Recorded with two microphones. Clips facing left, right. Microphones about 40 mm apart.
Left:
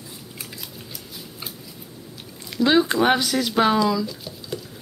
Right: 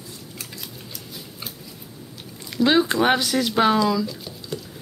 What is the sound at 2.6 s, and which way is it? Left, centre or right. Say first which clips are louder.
Speech: even; centre.